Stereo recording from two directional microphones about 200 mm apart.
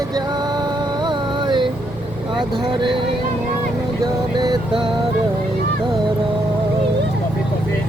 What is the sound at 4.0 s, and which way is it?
Vehicle, 20° right (ahead or behind).